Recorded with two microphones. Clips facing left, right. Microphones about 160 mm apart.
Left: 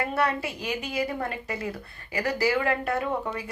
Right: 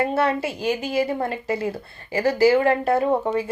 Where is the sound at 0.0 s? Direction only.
25° right (ahead or behind).